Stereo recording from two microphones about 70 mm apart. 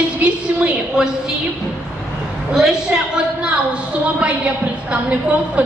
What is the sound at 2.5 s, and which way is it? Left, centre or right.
A woman's voice, centre.